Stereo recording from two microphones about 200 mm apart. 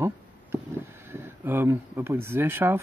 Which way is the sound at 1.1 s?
10° right (ahead or behind).